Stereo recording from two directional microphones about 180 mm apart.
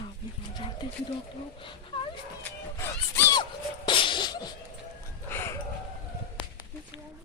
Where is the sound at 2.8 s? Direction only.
15° left (ahead or behind).